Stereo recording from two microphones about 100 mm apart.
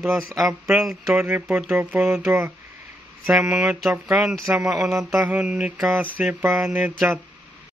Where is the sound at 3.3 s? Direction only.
5° right (ahead or behind).